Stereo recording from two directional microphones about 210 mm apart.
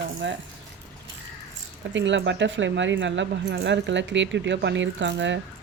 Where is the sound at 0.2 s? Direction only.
60° right (ahead or behind).